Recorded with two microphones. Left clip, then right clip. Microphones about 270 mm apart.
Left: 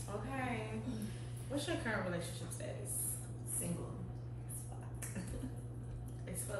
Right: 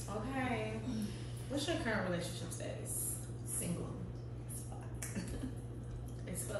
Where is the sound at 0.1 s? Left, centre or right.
Centre.